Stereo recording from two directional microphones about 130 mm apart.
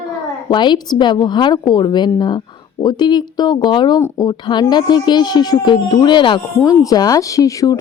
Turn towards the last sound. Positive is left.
turn(degrees=25)  # may be behind; listen again after turning